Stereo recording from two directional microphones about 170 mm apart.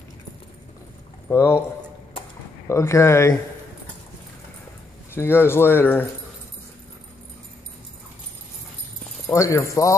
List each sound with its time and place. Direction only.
1.3 s speech: 15° left (ahead or behind)
2.7 s speech: 15° left (ahead or behind)
5.1 s speech: 15° left (ahead or behind)
9.3 s speech: 20° left (ahead or behind)